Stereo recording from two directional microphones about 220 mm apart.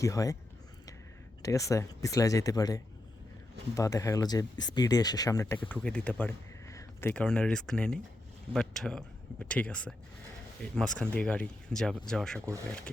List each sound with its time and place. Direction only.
0.0 s speech: 15° left (ahead or behind)
1.4 s speech: 15° left (ahead or behind)